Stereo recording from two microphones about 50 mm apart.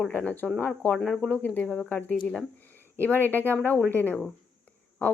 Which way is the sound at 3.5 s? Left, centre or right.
Left.